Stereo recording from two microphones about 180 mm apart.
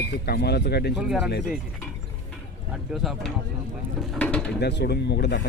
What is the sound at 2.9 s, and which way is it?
Speech, centre (ahead or behind).